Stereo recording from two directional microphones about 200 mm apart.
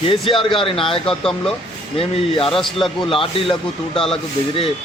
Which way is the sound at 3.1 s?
25° left (ahead or behind).